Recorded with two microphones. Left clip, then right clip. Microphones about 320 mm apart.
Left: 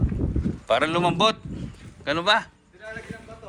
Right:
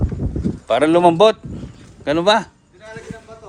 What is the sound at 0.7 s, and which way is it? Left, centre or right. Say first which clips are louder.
A man's voice: right 8 dB; right.